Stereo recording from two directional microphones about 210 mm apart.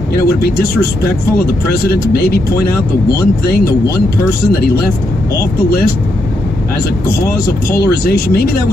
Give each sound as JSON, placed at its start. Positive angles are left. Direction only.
{"t": 0.1, "sound": "speech", "side_deg": 45}
{"t": 7.1, "sound": "speech", "side_deg": 45}